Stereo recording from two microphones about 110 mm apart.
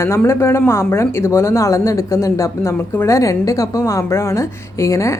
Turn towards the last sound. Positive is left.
turn(degrees=30)  # may be behind; listen again after turning